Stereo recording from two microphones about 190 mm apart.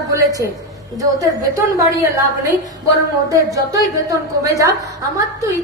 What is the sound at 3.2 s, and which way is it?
A woman's voice, 15° right (ahead or behind).